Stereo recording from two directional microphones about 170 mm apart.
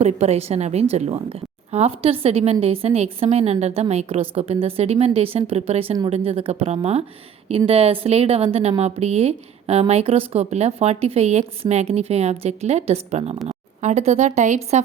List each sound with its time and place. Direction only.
0.0 s speech: 40° right (ahead or behind)